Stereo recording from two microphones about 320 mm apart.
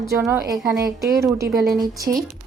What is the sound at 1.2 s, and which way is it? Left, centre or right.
Speech, centre.